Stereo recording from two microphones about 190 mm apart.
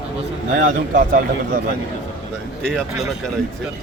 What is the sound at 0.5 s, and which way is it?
A man's voice, 45° right (ahead or behind).